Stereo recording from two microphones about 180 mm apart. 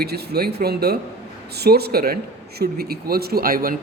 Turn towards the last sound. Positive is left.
turn(degrees=-55)  # may be behind; listen again after turning